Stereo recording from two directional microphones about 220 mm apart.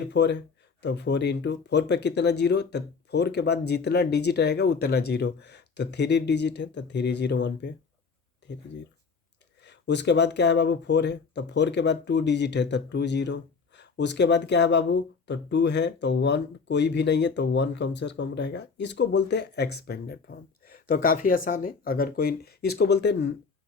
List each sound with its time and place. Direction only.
0.1 s speech: 50° left (ahead or behind)
8.4 s a sound: 50° left (ahead or behind)
9.6 s speech: 50° left (ahead or behind)